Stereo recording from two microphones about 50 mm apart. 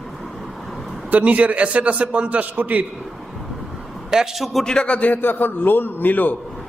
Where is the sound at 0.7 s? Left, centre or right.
Centre.